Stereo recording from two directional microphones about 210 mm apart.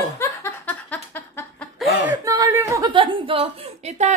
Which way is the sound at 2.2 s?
15° right (ahead or behind).